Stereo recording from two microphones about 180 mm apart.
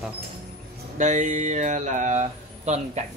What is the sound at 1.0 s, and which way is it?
Speech, 40° right (ahead or behind).